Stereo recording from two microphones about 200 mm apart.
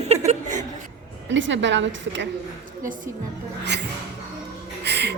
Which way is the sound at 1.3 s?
65° right (ahead or behind).